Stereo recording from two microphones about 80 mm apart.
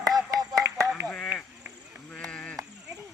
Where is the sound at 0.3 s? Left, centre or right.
Right.